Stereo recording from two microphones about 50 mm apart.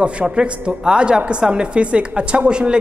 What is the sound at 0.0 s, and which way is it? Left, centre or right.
A woman's voice, right.